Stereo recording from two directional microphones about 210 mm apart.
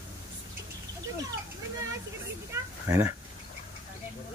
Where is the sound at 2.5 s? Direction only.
10° right (ahead or behind).